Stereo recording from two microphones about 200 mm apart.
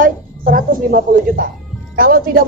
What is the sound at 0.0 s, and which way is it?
A woman's voice, 45° right (ahead or behind).